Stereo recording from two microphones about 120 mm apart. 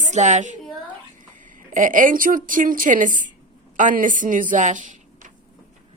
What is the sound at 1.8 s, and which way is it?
A woman's voice, 90° right.